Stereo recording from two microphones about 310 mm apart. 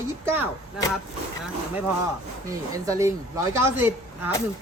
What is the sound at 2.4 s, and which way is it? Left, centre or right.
Speech, centre.